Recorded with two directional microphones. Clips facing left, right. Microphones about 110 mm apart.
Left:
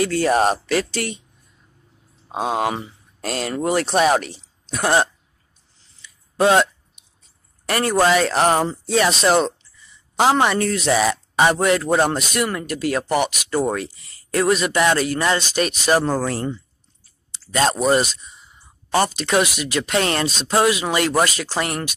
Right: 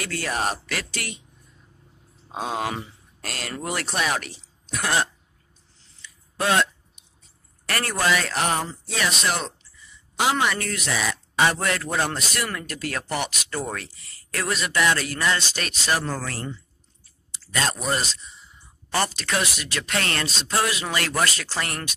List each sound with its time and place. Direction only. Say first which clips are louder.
0.0 s speech: left 10 dB; 25° left (ahead or behind)
2.2 s a woman's voice: left 6 dB; 20° left (ahead or behind)
6.0 s a sound: right 1 dB; 15° left (ahead or behind)
7.6 s speech: left 8 dB; 20° left (ahead or behind)
8.0 s speech: left 7 dB; 35° left (ahead or behind)
19.1 s speech: left 7 dB; 20° left (ahead or behind)